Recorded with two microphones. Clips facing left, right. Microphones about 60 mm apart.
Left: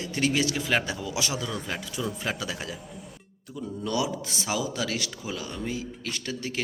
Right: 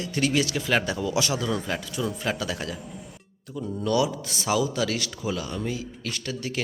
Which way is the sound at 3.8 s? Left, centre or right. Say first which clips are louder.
Right 5 dB; centre.